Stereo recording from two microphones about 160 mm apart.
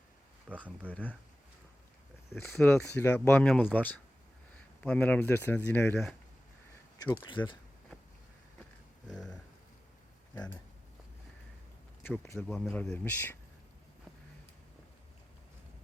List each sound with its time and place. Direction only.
0.5 s speech: 10° right (ahead or behind)
0.9 s speech: 10° left (ahead or behind)
2.3 s speech: 10° left (ahead or behind)
7.0 s speech: 15° left (ahead or behind)
7.3 s speech: 30° left (ahead or behind)
9.0 s a sound: 5° left (ahead or behind)
10.3 s speech: 10° left (ahead or behind)
12.0 s speech: 15° left (ahead or behind)